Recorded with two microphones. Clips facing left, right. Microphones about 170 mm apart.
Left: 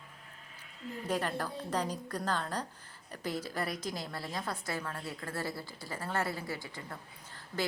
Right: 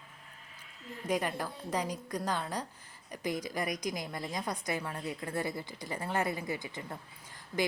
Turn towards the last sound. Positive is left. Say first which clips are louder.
# right 3 dB
turn(degrees=-15)  # may be behind; listen again after turning